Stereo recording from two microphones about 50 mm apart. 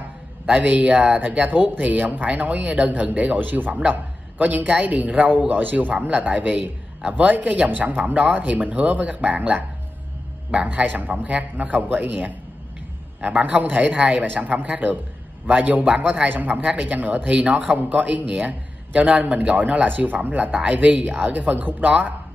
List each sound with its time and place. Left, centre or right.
0.5 s speech: right
3.3 s a man's voice: right
5.9 s a man's voice: right